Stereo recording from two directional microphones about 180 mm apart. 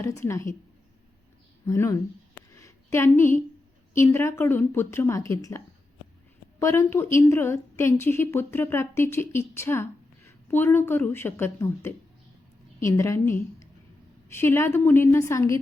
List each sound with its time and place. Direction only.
0.0 s a woman's voice: 15° left (ahead or behind)
1.6 s a woman's voice: 15° left (ahead or behind)
2.6 s a sound: 15° left (ahead or behind)
3.9 s a woman's voice: 15° left (ahead or behind)